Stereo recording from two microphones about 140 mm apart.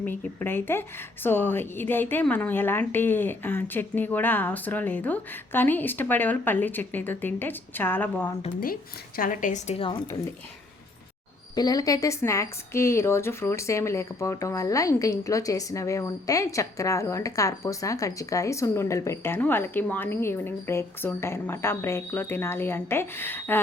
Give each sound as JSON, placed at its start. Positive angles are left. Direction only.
{"t": 0.0, "sound": "speech", "side_deg": 15}
{"t": 8.6, "sound": "a woman's voice", "side_deg": 90}
{"t": 11.5, "sound": "a woman's voice", "side_deg": 25}